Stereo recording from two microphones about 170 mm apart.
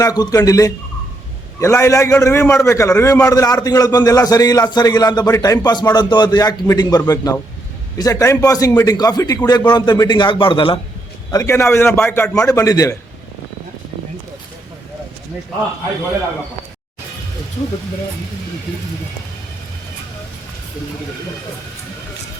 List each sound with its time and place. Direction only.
0.0 s a man's voice: 20° left (ahead or behind)
11.3 s a man's voice: 20° left (ahead or behind)